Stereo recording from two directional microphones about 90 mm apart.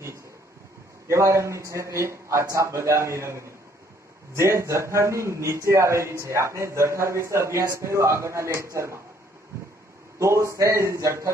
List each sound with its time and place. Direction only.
1.1 s a man's voice: 35° right (ahead or behind)
10.1 s a man's voice: 30° right (ahead or behind)